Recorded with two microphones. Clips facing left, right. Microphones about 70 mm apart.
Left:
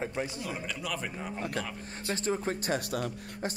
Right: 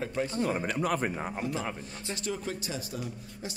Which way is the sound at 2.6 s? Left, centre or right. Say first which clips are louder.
Left 5 dB; left.